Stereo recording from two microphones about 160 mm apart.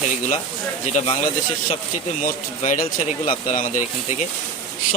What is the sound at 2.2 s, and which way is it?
Speech, 55° left (ahead or behind).